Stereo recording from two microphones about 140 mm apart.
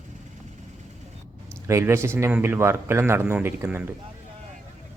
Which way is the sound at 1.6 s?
20° right (ahead or behind).